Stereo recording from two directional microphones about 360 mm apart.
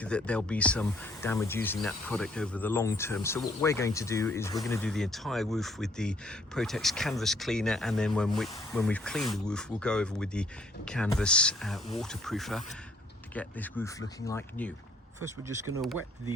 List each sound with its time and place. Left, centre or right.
0.0 s speech: centre
15.8 s speech: centre